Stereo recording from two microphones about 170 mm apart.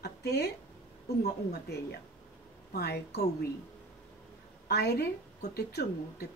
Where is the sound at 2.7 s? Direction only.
70° left (ahead or behind).